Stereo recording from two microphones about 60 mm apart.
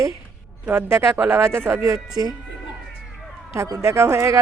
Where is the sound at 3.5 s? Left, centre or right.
Right.